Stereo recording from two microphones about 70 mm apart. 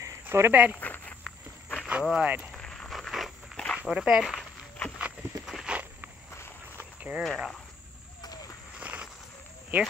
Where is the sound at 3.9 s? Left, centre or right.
Centre.